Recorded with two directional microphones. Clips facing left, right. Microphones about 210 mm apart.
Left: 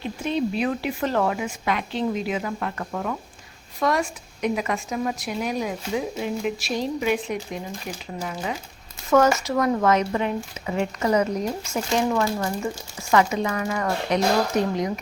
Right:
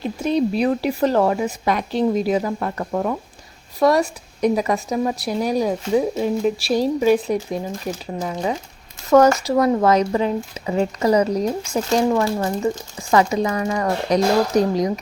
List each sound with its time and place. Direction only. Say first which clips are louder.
0.0 s a woman's voice: right 5 dB; 40° right (ahead or behind)
9.1 s a woman's voice: right 5 dB; 35° right (ahead or behind)